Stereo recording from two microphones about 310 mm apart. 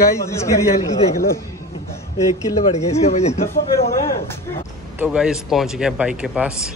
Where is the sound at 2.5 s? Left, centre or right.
Left.